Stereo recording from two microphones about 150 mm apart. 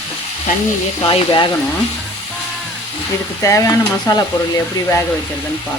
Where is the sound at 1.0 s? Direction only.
35° left (ahead or behind).